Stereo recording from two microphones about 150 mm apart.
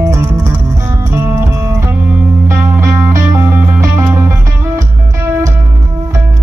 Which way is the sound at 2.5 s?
20° right (ahead or behind).